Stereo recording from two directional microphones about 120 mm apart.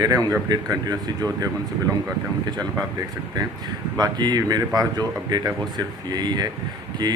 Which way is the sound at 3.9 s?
35° right (ahead or behind).